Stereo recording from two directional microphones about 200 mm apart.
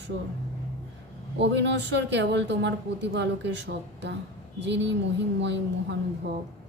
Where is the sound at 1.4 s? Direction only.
60° right (ahead or behind).